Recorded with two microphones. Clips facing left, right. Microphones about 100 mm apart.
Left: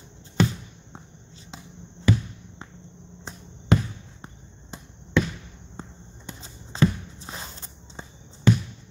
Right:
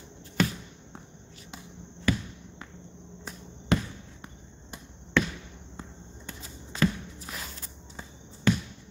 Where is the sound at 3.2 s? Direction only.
25° left (ahead or behind).